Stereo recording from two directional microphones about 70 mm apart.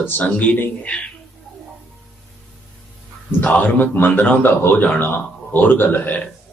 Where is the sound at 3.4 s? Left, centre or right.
Left.